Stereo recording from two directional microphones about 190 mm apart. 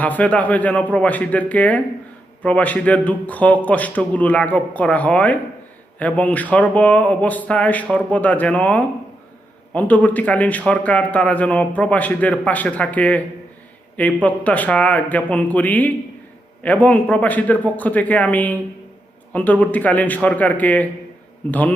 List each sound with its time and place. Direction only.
0.0 s speech: 10° left (ahead or behind)